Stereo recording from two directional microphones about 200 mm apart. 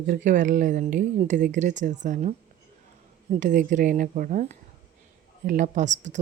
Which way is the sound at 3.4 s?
40° right (ahead or behind).